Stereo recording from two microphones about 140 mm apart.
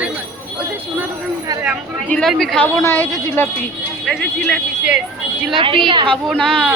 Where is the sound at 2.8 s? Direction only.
15° left (ahead or behind).